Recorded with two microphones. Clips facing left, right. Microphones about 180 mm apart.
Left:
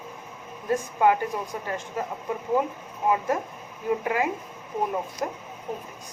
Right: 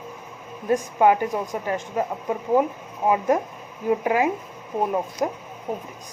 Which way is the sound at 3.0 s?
25° right (ahead or behind).